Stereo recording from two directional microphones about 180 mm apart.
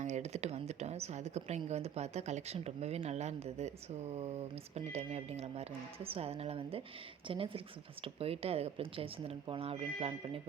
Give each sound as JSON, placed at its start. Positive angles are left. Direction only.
{"t": 0.0, "sound": "a woman's voice", "side_deg": -40}